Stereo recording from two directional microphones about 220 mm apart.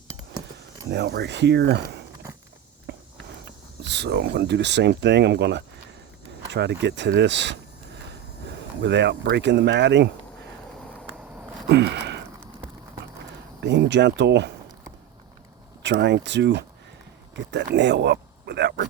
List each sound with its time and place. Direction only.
0.9 s speech: 50° right (ahead or behind)
2.9 s walk: 50° right (ahead or behind)
3.4 s speech: 50° right (ahead or behind)
8.8 s speech: 50° right (ahead or behind)
11.7 s a sound: 50° right (ahead or behind)
13.6 s speech: 50° right (ahead or behind)
15.8 s speech: 50° right (ahead or behind)